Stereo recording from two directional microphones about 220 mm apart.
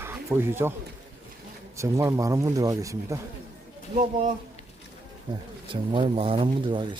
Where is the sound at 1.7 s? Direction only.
15° right (ahead or behind).